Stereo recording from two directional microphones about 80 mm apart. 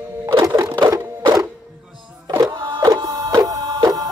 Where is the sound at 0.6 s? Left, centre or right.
Right.